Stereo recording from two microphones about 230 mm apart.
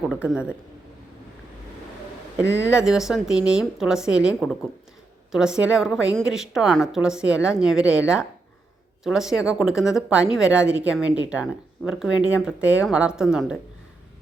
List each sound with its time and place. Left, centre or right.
0.1 s a woman's voice: centre
2.4 s speech: right
2.6 s a woman's voice: centre